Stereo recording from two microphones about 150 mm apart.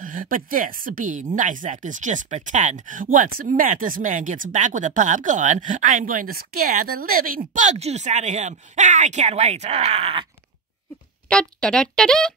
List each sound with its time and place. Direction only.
0.0 s speech: 65° right (ahead or behind); by 10.2 s 45° right (ahead or behind)
11.2 s speech: 5° left (ahead or behind)